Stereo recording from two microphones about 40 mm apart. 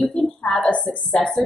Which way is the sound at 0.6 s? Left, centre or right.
Left.